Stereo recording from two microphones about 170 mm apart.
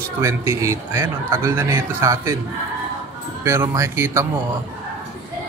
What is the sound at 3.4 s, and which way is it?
Speech, 15° right (ahead or behind).